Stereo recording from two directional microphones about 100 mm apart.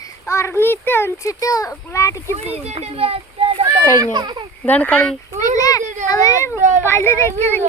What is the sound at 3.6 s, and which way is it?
Speech, 40° right (ahead or behind).